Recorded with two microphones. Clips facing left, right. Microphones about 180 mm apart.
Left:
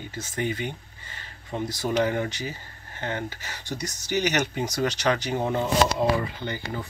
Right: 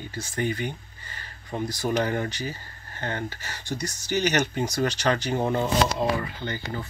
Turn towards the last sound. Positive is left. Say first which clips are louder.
# even
turn(degrees=15)  # may be behind; listen again after turning